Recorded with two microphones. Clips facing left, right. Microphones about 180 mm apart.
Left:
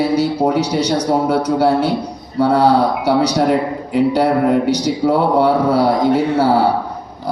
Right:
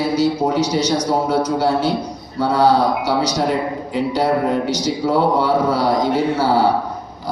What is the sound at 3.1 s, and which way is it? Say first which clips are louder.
A man's voice: left 4 dB; 60° left (ahead or behind).